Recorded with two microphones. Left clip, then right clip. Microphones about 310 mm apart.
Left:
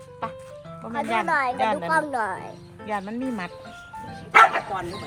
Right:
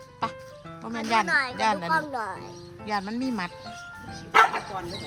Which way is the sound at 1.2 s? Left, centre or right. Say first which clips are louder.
Left 2 dB; centre.